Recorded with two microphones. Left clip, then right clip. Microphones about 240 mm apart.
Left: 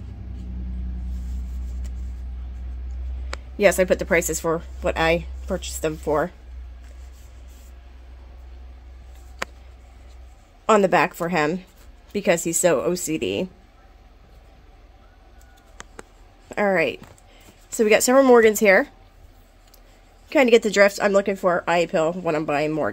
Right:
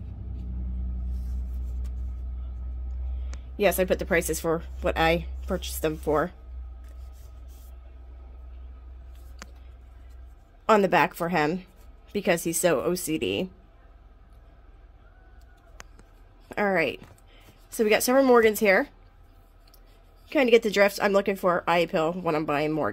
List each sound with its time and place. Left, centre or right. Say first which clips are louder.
3.5 s speech: left 6 dB; centre
10.7 s speech: left 3 dB; centre
16.4 s speech: left 4 dB; centre
20.2 s speech: left 4 dB; centre